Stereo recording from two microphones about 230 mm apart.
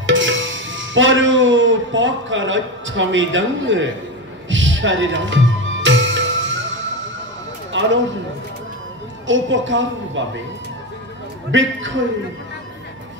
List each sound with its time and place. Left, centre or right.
0.0 s music: right
9.3 s a woman's voice: right
11.5 s a woman's voice: right